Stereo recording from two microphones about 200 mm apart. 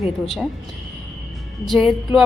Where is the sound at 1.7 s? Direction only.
Centre (ahead or behind).